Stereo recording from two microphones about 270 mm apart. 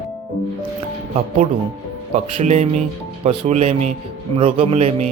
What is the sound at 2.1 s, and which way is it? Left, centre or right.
Speech, right.